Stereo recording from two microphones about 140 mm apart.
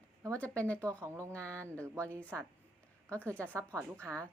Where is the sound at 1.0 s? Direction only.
20° right (ahead or behind).